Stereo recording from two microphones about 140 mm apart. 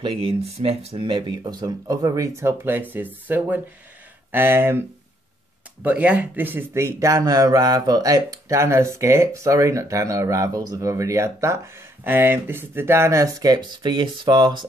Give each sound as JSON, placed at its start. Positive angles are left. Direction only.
{"t": 0.0, "sound": "speech", "side_deg": -40}